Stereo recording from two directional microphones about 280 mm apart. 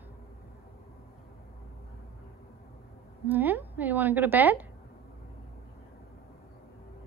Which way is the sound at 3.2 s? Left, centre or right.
Centre.